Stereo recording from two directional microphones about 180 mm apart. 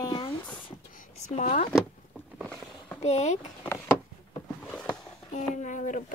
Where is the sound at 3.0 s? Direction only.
40° left (ahead or behind).